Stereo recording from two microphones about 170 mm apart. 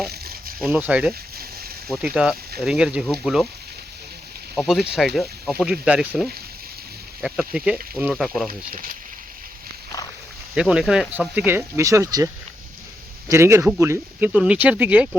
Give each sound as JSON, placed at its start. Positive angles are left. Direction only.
{"t": 0.1, "sound": "a sound", "side_deg": -65}
{"t": 0.7, "sound": "speech", "side_deg": -10}
{"t": 4.5, "sound": "speech", "side_deg": 0}
{"t": 8.4, "sound": "speech", "side_deg": -55}
{"t": 10.5, "sound": "speech", "side_deg": -5}